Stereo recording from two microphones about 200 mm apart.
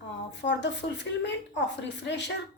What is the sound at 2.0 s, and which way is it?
Speech, 60° left (ahead or behind).